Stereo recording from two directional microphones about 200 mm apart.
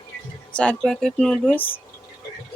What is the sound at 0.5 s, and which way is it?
Speech, 5° left (ahead or behind).